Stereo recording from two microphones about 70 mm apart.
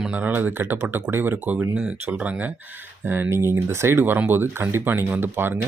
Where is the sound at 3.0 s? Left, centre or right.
Right.